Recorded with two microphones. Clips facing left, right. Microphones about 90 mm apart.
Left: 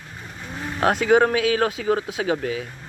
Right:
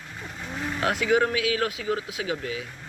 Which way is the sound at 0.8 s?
50° left (ahead or behind).